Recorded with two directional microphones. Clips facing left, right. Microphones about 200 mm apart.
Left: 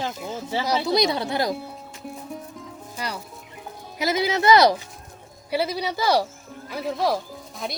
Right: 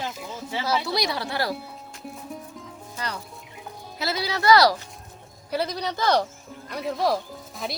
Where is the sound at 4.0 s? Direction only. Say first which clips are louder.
Left 5 dB; 20° left (ahead or behind).